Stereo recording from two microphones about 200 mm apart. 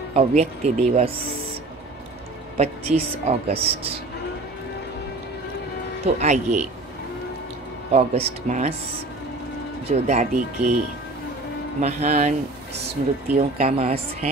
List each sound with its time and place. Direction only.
0.1 s speech: 35° right (ahead or behind)
2.5 s speech: 30° right (ahead or behind)
6.0 s speech: 35° right (ahead or behind)
7.9 s speech: 30° right (ahead or behind)
9.8 s speech: 35° right (ahead or behind)
11.8 s speech: 35° right (ahead or behind)